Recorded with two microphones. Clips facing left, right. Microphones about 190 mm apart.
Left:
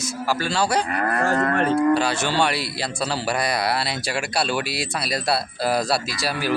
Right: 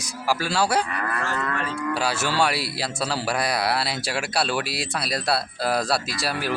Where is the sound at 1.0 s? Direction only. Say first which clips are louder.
Left 7 dB; 50° left (ahead or behind).